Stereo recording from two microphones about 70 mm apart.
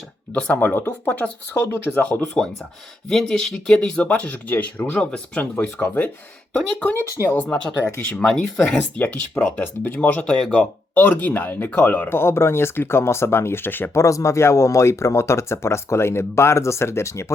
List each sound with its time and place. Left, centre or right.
0.3 s speech: centre
1.5 s speech: left
2.2 s speech: centre
4.9 s speech: centre
8.2 s speech: centre
9.4 s speech: left
10.5 s speech: centre
11.0 s speech: left
13.9 s speech: left